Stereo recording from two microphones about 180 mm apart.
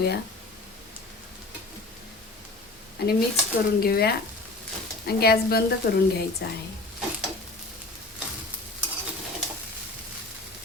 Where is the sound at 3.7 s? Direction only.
60° left (ahead or behind).